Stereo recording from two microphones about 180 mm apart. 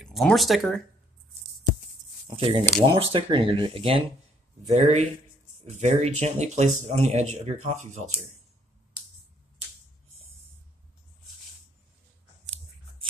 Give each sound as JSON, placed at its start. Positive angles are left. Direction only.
{"t": 0.0, "sound": "speech", "side_deg": 0}
{"t": 2.2, "sound": "speech", "side_deg": -30}